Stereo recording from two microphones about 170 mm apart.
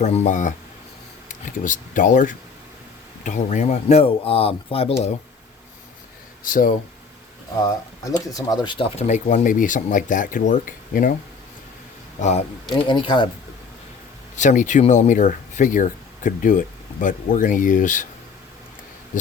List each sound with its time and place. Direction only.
0.0 s speech: 40° left (ahead or behind)
6.4 s speech: 55° left (ahead or behind)
8.3 s speech: 20° left (ahead or behind); by 11.1 s 55° left (ahead or behind)
12.2 s speech: 40° left (ahead or behind)
12.7 s speech: 30° left (ahead or behind)
14.3 s speech: 45° left (ahead or behind)